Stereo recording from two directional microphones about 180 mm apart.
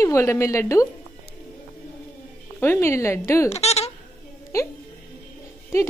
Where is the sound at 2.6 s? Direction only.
15° left (ahead or behind).